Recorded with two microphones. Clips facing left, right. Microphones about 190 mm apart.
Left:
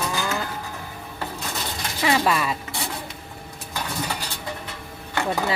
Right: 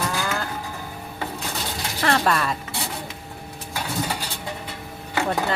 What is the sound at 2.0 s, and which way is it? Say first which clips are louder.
Speech: even; 5° left (ahead or behind).